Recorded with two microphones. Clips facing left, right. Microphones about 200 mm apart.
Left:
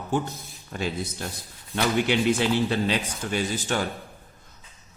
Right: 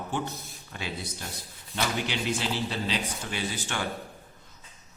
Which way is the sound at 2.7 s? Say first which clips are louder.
Left 6 dB; 50° left (ahead or behind).